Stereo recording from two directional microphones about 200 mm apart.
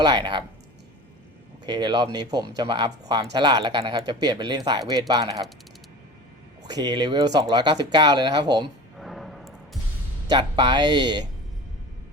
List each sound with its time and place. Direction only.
0.0 s speech: 20° right (ahead or behind)
1.6 s speech: 20° right (ahead or behind)
6.7 s speech: 20° right (ahead or behind)
9.0 s music: centre (ahead or behind)
10.2 s speech: 25° right (ahead or behind)